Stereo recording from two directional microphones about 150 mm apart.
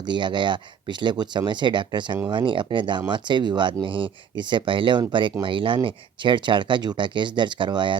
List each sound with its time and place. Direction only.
0.0 s speech: 30° right (ahead or behind)